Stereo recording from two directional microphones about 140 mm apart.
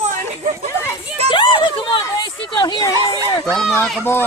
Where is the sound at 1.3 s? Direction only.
35° left (ahead or behind).